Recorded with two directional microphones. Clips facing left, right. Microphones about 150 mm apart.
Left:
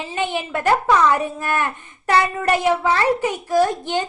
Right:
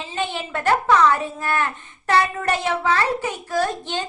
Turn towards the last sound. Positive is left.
turn(degrees=15)  # may be behind; listen again after turning